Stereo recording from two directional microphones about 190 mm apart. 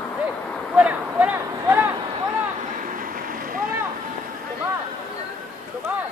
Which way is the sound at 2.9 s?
45° right (ahead or behind).